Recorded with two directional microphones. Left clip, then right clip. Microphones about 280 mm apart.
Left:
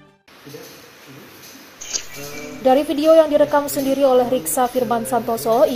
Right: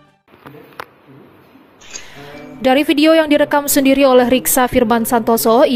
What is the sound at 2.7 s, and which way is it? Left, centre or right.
Speech, right.